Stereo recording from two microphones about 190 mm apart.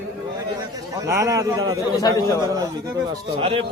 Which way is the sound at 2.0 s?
15° left (ahead or behind).